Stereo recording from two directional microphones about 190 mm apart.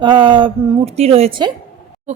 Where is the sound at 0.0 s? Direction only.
25° right (ahead or behind).